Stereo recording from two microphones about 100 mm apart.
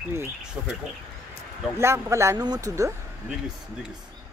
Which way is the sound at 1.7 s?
25° right (ahead or behind).